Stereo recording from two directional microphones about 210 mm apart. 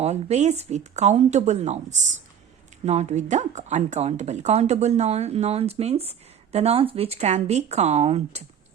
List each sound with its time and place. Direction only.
0.0 s speech: 30° right (ahead or behind)